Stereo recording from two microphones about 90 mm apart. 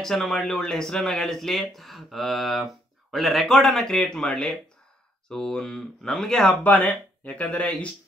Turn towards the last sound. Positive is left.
turn(degrees=15)  # may be behind; listen again after turning